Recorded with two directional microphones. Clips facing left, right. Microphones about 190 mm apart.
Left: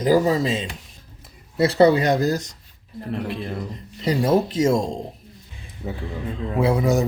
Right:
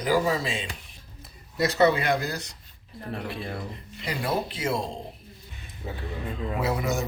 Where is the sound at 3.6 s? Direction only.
40° left (ahead or behind).